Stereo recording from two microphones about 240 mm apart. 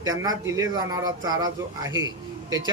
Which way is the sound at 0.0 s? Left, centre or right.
Centre.